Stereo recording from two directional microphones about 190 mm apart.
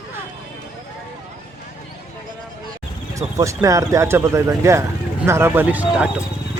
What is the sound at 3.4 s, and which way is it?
A man's voice, 15° right (ahead or behind).